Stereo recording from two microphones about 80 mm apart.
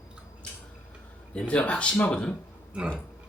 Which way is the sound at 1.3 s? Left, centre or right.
Centre.